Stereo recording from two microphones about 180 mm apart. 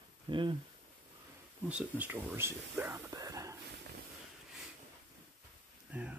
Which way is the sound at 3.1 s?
20° right (ahead or behind).